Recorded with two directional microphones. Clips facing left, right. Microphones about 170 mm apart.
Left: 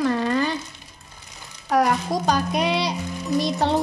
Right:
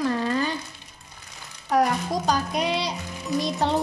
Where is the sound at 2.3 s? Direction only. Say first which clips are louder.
Left 3 dB; 70° left (ahead or behind).